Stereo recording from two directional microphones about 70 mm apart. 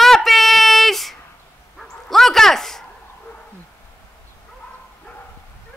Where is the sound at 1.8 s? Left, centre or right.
Centre.